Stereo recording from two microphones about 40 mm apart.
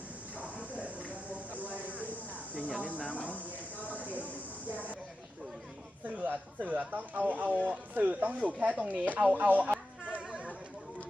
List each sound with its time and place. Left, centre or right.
0.3 s a sound: right
2.6 s cricket: right
3.0 s cricket: left
3.8 s a sound: left
6.2 s speech: right
10.2 s chatter: right